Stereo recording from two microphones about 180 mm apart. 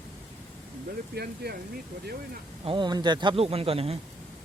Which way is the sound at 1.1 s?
60° right (ahead or behind).